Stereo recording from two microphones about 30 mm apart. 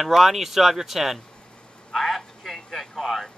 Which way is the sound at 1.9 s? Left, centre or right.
Centre.